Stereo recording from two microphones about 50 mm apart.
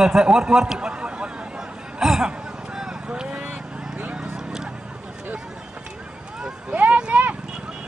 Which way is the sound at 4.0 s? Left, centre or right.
Right.